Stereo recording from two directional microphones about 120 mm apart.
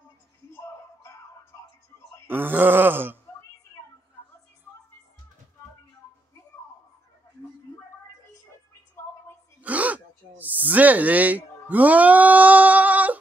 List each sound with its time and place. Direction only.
0.6 s music: 25° left (ahead or behind)
2.2 s groan: 15° right (ahead or behind)
9.6 s a sound: 10° right (ahead or behind)